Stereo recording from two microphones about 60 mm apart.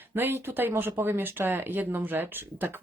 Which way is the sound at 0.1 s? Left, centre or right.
Right.